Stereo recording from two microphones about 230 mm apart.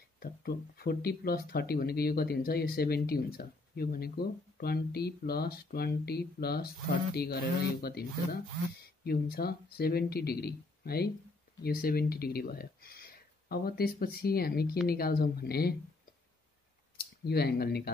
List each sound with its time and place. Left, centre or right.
0.2 s speech: left
17.0 s speech: left